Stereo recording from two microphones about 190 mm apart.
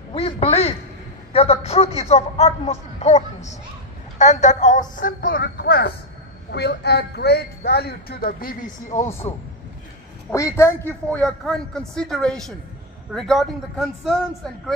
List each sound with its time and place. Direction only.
0.1 s quack: 30° left (ahead or behind)
1.3 s a man's voice: 30° left (ahead or behind)
10.3 s a man's voice: 15° left (ahead or behind)